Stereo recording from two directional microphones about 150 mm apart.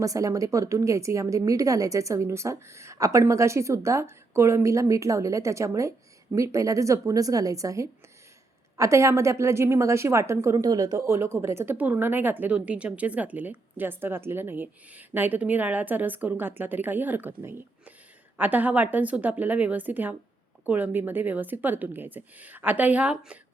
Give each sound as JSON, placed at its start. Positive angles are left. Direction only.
{"t": 0.0, "sound": "a woman's voice", "side_deg": -20}